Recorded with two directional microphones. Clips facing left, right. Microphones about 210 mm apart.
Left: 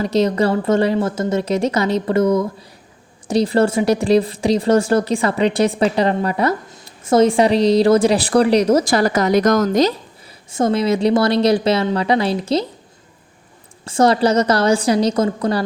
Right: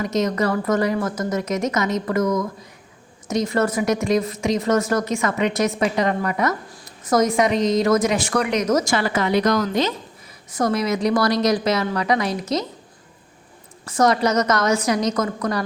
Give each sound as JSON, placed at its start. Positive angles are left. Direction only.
{"t": 0.0, "sound": "a woman's voice", "side_deg": 30}
{"t": 10.5, "sound": "a woman's voice", "side_deg": 25}
{"t": 13.8, "sound": "a woman's voice", "side_deg": 30}